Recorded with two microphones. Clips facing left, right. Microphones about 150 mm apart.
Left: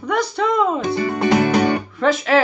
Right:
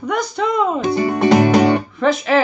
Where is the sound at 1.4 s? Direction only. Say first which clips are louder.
Right 4 dB; 20° right (ahead or behind).